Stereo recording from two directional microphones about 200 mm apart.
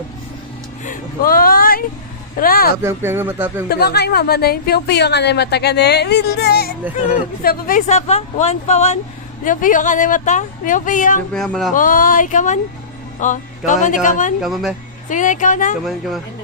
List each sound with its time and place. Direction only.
0.9 s a sound: 45° left (ahead or behind)
2.3 s speech: 45° left (ahead or behind)
2.8 s speech: 10° right (ahead or behind)
3.7 s a woman's voice: 55° left (ahead or behind)
11.3 s speech: centre (ahead or behind)
11.7 s speech: 45° left (ahead or behind)
14.4 s speech: centre (ahead or behind)
15.1 s speech: 40° left (ahead or behind)
15.8 s speech: centre (ahead or behind)